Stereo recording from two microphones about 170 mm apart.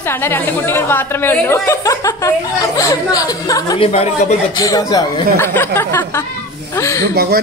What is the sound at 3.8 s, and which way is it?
Speech, 35° left (ahead or behind).